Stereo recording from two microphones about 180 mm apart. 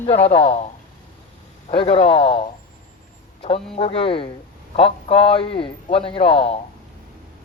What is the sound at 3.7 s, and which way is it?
A man's voice, 30° left (ahead or behind).